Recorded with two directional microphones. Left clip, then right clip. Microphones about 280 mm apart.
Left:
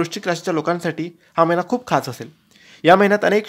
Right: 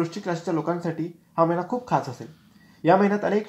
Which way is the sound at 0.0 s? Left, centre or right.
Left.